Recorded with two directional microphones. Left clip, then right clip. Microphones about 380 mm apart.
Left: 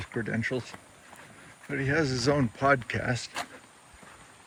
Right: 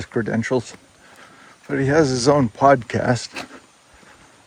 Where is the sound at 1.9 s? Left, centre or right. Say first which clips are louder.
Right 11 dB; centre.